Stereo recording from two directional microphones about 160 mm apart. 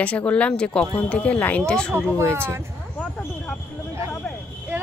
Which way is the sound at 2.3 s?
15° right (ahead or behind).